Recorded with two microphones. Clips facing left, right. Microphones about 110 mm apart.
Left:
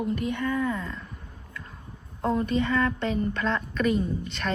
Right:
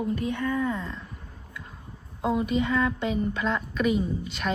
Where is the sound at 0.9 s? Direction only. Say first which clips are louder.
Even; centre (ahead or behind).